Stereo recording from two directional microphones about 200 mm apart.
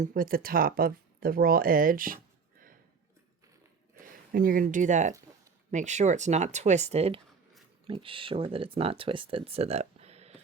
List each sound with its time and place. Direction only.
0.0 s speech: 45° right (ahead or behind)
4.0 s speech: 45° right (ahead or behind)